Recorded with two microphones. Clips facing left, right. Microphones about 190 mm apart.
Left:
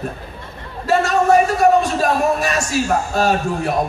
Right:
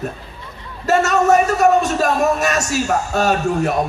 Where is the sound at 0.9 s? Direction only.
40° right (ahead or behind).